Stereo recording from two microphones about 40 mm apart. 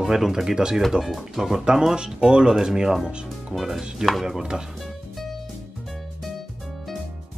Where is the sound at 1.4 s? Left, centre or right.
Centre.